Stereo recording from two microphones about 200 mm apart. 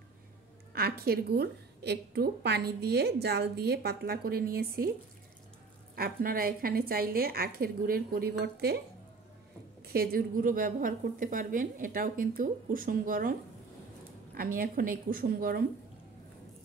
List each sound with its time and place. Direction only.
0.7 s a woman's voice: 50° right (ahead or behind)
5.9 s a woman's voice: 45° right (ahead or behind)
9.8 s a woman's voice: 50° right (ahead or behind)